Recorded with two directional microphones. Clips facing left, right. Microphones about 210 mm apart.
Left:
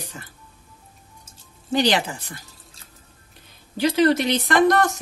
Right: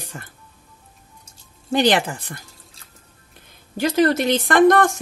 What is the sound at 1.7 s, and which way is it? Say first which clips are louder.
Speech: right 3 dB; 50° right (ahead or behind).